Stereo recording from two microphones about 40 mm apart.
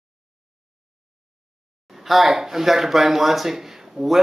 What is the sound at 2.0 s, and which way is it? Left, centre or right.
A man's voice, centre.